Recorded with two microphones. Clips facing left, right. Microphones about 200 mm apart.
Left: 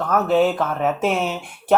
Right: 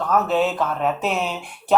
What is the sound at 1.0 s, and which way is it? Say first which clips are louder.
Speech: left 3 dB; 50° left (ahead or behind).